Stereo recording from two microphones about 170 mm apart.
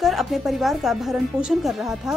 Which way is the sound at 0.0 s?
Centre (ahead or behind).